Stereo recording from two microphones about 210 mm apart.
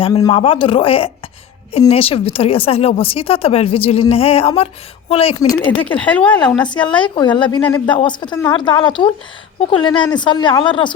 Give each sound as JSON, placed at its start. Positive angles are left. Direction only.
{"t": 0.0, "sound": "a woman's voice", "side_deg": 15}
{"t": 5.4, "sound": "speech", "side_deg": 15}
{"t": 6.1, "sound": "speech", "side_deg": 5}
{"t": 6.7, "sound": "a woman's voice", "side_deg": 20}